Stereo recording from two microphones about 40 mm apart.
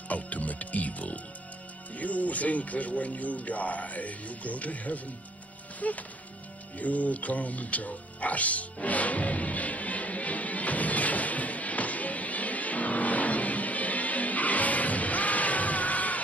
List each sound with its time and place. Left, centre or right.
0.1 s music: left
2.0 s speech: left
6.8 s music: left